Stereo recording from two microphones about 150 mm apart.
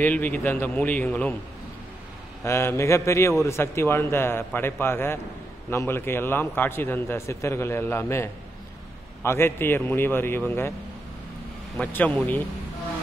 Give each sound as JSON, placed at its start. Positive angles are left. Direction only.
{"t": 0.0, "sound": "a man's voice", "side_deg": 10}
{"t": 2.4, "sound": "a man's voice", "side_deg": 20}
{"t": 11.9, "sound": "a man's voice", "side_deg": 10}